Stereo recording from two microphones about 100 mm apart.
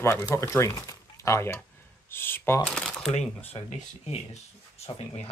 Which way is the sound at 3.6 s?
55° left (ahead or behind).